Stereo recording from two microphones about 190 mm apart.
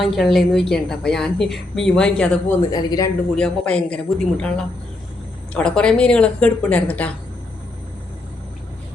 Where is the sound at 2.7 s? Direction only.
20° left (ahead or behind).